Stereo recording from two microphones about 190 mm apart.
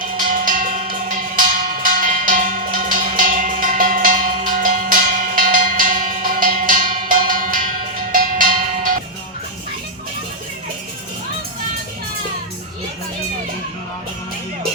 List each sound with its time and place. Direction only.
0.3 s cowbell: 45° right (ahead or behind)